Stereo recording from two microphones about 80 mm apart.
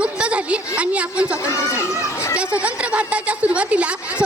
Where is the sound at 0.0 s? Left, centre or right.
Centre.